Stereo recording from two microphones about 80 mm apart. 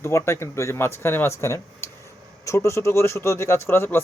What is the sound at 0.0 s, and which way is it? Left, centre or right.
Speech, left.